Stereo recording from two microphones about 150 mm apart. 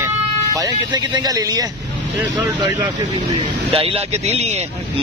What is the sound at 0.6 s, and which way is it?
Speech, 25° right (ahead or behind).